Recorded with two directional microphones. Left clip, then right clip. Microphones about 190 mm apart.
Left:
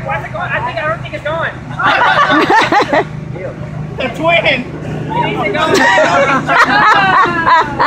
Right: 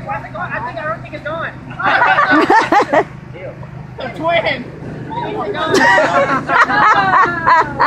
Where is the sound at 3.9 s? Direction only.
60° left (ahead or behind).